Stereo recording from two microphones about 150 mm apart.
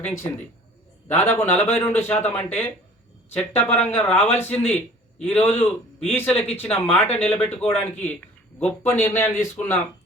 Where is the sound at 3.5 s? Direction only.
45° left (ahead or behind).